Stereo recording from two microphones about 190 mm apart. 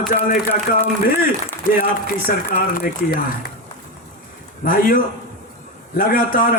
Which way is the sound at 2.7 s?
50° left (ahead or behind).